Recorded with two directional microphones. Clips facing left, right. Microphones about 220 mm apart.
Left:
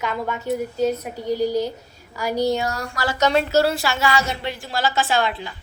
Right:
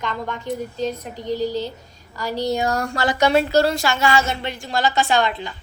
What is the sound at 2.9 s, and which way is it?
Speech, 20° right (ahead or behind).